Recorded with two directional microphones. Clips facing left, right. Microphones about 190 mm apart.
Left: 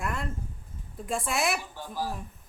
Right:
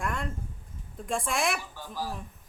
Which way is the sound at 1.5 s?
15° left (ahead or behind).